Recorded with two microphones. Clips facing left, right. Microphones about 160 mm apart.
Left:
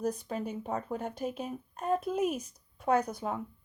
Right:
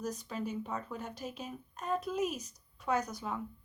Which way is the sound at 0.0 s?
55° left (ahead or behind).